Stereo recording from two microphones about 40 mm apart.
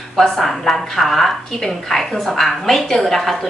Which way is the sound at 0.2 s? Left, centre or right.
Centre.